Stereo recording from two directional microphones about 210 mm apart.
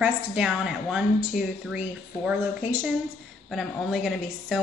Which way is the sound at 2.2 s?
5° right (ahead or behind).